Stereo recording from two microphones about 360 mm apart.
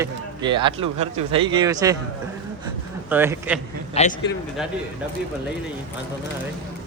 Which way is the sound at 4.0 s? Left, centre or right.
Centre.